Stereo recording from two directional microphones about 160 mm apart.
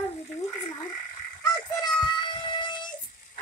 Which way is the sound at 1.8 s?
30° left (ahead or behind).